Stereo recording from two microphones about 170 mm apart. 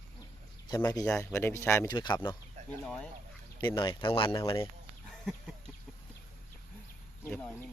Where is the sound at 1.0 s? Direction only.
10° left (ahead or behind).